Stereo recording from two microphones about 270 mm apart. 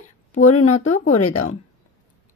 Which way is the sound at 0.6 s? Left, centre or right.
Left.